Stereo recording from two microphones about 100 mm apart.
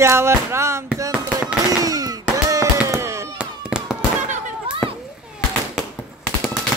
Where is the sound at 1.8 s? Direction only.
40° right (ahead or behind).